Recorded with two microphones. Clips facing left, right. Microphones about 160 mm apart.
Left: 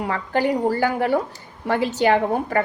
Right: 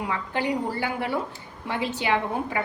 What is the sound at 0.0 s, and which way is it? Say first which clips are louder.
A woman's voice: left 6 dB; 50° left (ahead or behind).